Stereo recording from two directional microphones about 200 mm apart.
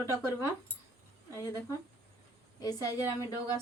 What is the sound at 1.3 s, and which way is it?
A woman's voice, 15° left (ahead or behind).